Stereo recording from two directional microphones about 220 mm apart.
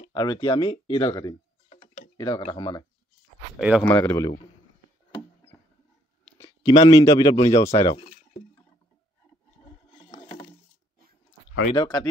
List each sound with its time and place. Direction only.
0.1 s speech: 20° left (ahead or behind)
3.5 s speech: 5° right (ahead or behind)
3.8 s speech: 5° left (ahead or behind)
6.3 s speech: 15° left (ahead or behind)
11.7 s speech: 20° left (ahead or behind)